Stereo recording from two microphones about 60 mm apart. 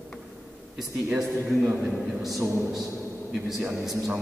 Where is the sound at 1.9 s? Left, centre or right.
Centre.